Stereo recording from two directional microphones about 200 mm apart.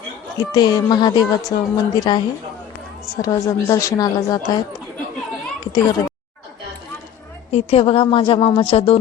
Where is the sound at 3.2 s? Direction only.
15° left (ahead or behind).